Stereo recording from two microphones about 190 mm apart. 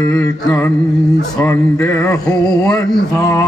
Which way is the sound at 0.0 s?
15° left (ahead or behind).